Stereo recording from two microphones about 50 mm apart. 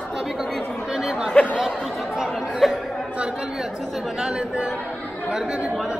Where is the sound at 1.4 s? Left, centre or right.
Left.